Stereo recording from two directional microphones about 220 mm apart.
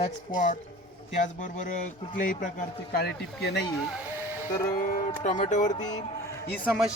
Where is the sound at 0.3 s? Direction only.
35° left (ahead or behind).